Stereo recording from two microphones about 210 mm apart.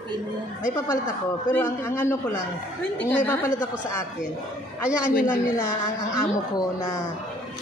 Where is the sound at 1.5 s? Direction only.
10° left (ahead or behind).